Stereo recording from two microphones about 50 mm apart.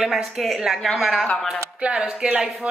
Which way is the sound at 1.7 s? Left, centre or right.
Right.